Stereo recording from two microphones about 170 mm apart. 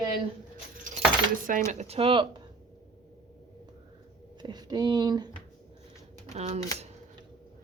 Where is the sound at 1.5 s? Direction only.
50° right (ahead or behind); by 2.4 s 30° right (ahead or behind).